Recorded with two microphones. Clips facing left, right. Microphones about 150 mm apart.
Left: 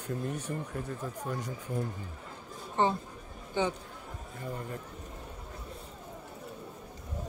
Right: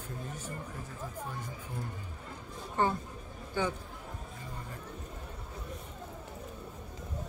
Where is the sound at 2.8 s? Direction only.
20° left (ahead or behind).